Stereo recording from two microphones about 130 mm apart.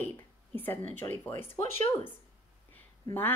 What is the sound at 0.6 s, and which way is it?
Speech, 15° left (ahead or behind).